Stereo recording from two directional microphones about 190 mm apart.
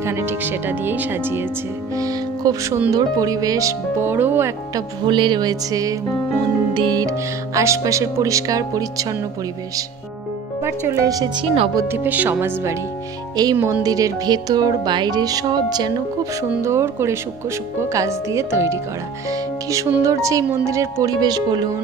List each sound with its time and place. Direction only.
0.0 s speech: 15° right (ahead or behind)
5.0 s speech: 25° right (ahead or behind)
10.6 s speech: 15° right (ahead or behind)